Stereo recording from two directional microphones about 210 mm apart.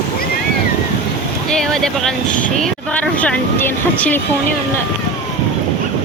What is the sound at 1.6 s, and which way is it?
Speech, centre (ahead or behind).